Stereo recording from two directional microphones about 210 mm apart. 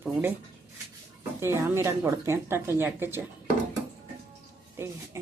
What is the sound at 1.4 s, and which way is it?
Speech, 10° right (ahead or behind).